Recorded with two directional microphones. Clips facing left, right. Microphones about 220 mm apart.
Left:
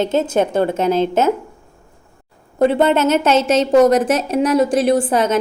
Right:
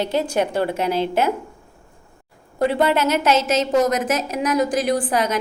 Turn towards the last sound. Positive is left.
turn(degrees=25)  # may be behind; listen again after turning